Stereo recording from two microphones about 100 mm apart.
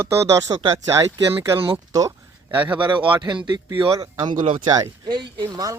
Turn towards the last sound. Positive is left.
turn(degrees=-45)  # may be behind; listen again after turning